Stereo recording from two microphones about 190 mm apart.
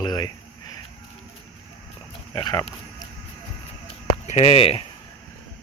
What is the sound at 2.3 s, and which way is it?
Speech, 20° left (ahead or behind).